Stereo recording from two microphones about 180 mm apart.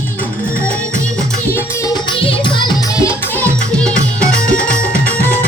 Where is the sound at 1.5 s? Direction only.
20° left (ahead or behind).